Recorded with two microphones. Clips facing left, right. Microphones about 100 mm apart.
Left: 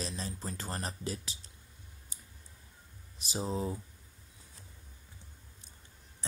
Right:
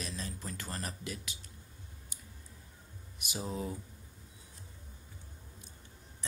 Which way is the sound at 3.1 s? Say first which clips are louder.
Left 3 dB; 30° left (ahead or behind).